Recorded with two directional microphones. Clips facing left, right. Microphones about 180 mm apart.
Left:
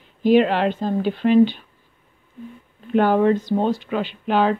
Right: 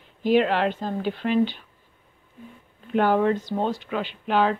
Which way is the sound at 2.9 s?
35° left (ahead or behind).